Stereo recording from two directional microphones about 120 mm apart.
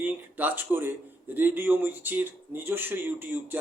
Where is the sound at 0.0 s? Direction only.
15° right (ahead or behind).